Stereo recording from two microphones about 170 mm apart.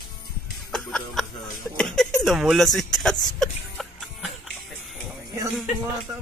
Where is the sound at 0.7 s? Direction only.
5° left (ahead or behind).